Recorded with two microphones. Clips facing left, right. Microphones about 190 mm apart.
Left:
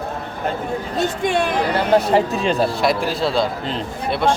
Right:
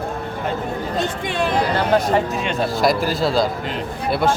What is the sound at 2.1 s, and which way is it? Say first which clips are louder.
Speech: left 3 dB; 35° left (ahead or behind).